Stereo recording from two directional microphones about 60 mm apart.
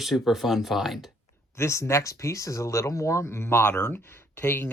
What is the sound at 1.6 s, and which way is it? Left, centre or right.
Speech, left.